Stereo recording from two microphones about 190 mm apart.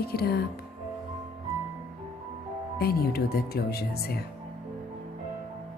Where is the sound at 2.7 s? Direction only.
55° left (ahead or behind).